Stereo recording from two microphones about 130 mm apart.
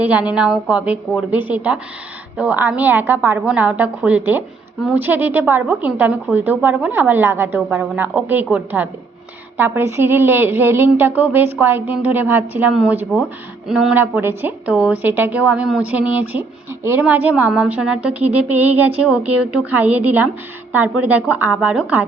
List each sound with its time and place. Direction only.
0.0 s a woman's voice: 10° right (ahead or behind)
13.9 s a woman's voice: 15° right (ahead or behind)